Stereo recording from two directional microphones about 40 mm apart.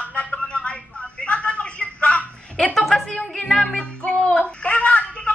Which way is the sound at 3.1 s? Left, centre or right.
Left.